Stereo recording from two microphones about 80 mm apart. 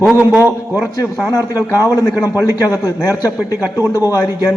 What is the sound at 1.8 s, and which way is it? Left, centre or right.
Speech, left.